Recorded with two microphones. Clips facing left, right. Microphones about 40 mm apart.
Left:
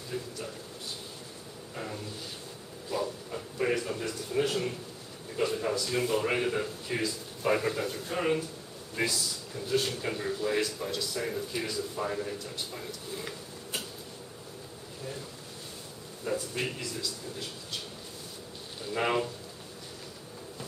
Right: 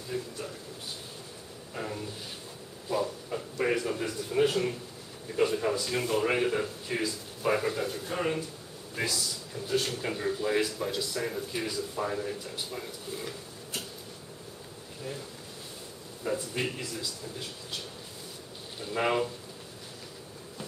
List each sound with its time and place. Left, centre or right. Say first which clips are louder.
0.1 s speech: right 1 dB; centre
1.7 s a sound: right 2 dB; centre
4.0 s speech: right 3 dB; centre
15.0 s speech: right 2 dB; centre
16.3 s speech: right 1 dB; centre
18.9 s speech: right 1 dB; centre